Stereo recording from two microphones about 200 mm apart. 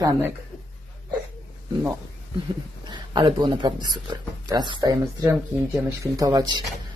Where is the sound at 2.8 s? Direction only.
20° right (ahead or behind).